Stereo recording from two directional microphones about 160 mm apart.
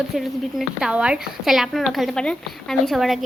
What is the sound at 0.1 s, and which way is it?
Speech, 5° right (ahead or behind).